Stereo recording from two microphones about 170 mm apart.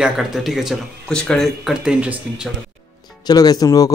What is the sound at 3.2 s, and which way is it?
Speech, 20° left (ahead or behind).